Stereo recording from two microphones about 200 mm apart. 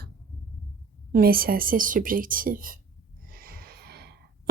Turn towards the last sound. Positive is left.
turn(degrees=-55)  # may be behind; listen again after turning